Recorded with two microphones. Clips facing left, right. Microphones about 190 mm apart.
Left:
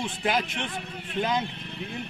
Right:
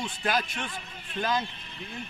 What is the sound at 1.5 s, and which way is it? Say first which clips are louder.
Vehicle: left 8 dB; 65° left (ahead or behind).